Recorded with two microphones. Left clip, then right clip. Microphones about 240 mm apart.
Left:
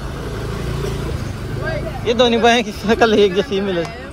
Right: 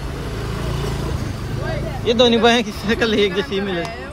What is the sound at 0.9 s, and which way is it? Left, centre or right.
Vehicle, centre.